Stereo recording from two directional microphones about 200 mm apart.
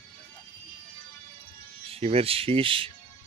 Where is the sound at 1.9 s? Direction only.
30° right (ahead or behind).